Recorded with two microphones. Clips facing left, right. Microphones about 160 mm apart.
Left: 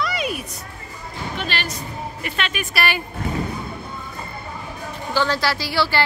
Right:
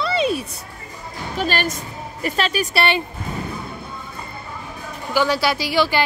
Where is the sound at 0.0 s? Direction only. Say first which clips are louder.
Right 5 dB; 30° right (ahead or behind).